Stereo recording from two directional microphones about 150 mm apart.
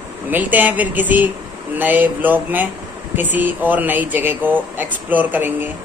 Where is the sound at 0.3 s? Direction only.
10° right (ahead or behind).